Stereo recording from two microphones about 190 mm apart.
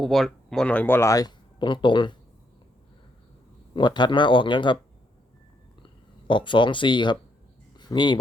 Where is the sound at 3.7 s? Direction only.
25° left (ahead or behind).